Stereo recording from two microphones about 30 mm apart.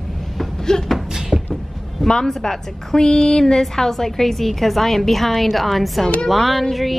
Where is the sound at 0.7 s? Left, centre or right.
Left.